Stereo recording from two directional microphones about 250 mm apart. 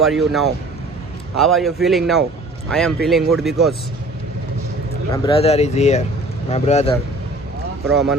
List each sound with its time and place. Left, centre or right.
0.0 s speech: centre
5.1 s speech: left